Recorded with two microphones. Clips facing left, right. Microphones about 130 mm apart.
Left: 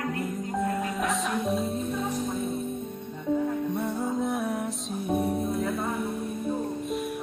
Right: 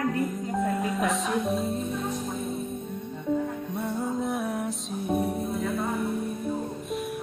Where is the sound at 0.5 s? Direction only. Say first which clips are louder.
Right 1 dB; centre (ahead or behind).